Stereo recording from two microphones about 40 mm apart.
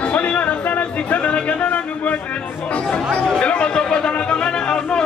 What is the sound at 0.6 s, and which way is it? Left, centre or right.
Speech, left.